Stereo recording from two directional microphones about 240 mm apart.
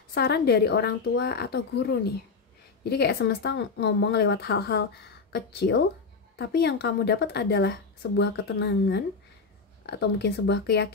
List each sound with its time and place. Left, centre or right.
0.1 s a woman's voice: left